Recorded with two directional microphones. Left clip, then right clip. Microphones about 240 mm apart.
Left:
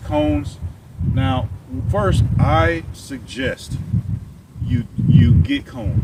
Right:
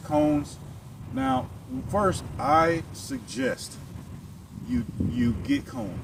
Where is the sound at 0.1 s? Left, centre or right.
Centre.